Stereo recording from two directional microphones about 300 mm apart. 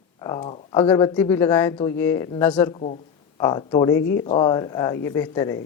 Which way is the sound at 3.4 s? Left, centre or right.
Centre.